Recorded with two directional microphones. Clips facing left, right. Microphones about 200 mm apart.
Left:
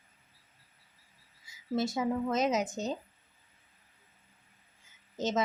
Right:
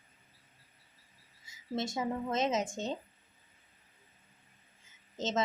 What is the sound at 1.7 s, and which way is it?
Speech, 25° right (ahead or behind).